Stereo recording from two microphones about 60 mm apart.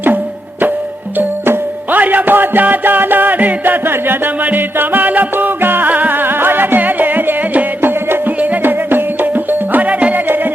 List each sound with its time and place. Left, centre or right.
1.5 s music: right